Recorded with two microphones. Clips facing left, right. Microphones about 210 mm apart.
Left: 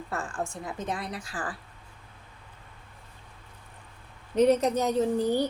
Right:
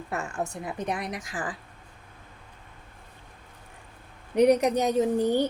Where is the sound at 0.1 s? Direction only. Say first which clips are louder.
Right 2 dB; 20° right (ahead or behind).